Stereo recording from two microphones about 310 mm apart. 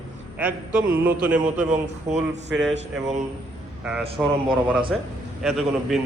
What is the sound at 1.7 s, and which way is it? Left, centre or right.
Speech, right.